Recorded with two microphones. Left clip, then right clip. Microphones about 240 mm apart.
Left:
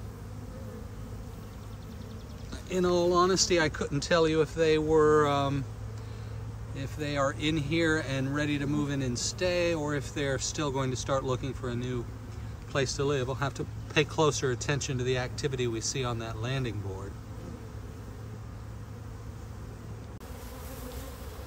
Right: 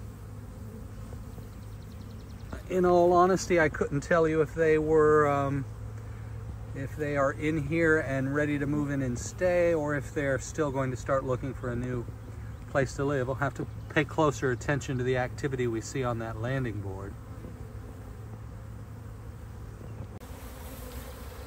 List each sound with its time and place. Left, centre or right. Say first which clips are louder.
3.3 s speech: right 1 dB; centre
6.8 s speech: right 2 dB; centre